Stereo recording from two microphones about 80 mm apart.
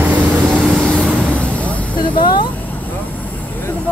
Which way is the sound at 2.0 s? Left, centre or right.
Left.